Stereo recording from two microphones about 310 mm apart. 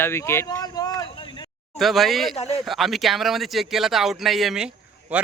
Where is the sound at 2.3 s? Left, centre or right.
Centre.